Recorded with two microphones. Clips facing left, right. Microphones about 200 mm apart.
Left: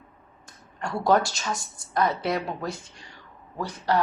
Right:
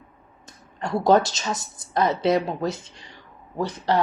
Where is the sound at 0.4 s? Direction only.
20° right (ahead or behind).